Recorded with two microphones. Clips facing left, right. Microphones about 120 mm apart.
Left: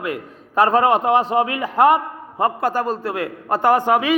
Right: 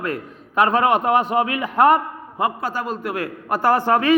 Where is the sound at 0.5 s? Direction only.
35° left (ahead or behind).